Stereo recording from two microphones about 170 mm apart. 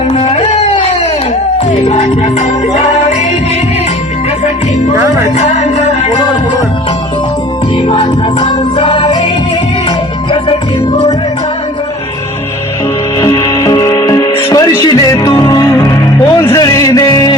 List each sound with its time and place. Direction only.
0.1 s a sound: 35° left (ahead or behind)
2.7 s music: 45° left (ahead or behind)
4.9 s music: 20° right (ahead or behind)
5.4 s music: 40° left (ahead or behind)
7.9 s music: 30° left (ahead or behind)
13.1 s music: 20° left (ahead or behind)